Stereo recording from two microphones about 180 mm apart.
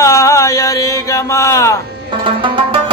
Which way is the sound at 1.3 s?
15° left (ahead or behind).